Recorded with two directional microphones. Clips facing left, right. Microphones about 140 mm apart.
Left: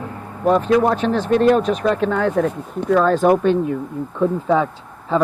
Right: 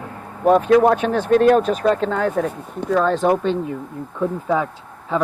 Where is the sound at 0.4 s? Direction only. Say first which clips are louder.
Right 2 dB; 50° right (ahead or behind); by 2.2 s 35° right (ahead or behind).